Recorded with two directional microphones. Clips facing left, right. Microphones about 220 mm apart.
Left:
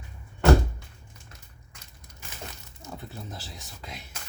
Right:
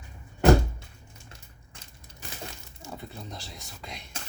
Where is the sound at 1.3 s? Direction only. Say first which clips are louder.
Right 1 dB; 30° right (ahead or behind).